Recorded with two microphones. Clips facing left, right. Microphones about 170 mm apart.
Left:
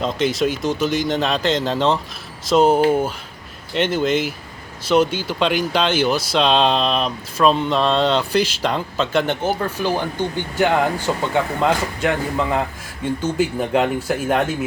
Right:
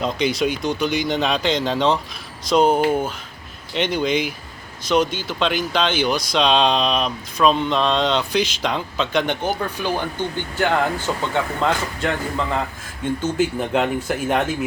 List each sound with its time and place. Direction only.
0.0 s speech: centre (ahead or behind)